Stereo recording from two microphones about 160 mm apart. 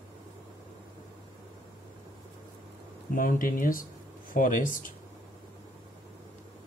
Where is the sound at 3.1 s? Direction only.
60° left (ahead or behind).